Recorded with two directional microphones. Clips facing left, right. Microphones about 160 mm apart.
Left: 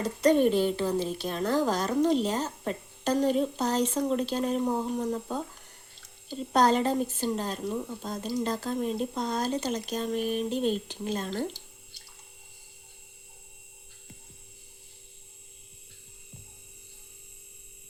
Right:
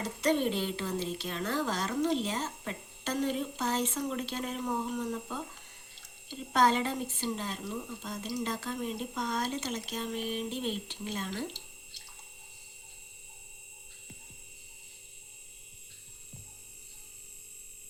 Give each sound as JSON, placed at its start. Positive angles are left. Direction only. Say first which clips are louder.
{"t": 0.0, "sound": "a woman's voice", "louder": "left 7 dB", "side_deg": 45}